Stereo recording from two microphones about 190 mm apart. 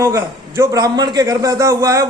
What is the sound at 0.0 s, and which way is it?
A man's voice, 15° right (ahead or behind).